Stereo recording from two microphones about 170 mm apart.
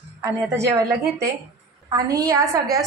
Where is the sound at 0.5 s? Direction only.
15° right (ahead or behind).